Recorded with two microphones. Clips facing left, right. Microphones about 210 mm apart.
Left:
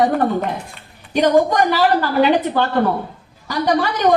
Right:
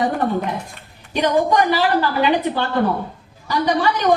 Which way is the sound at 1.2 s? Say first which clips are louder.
Left 2 dB; 45° left (ahead or behind).